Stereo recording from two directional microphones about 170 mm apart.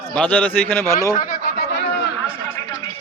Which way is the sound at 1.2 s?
60° left (ahead or behind).